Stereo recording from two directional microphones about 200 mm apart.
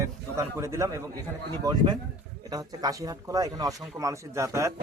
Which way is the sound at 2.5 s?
20° right (ahead or behind).